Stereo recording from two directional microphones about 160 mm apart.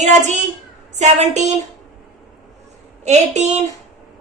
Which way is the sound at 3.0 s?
45° right (ahead or behind).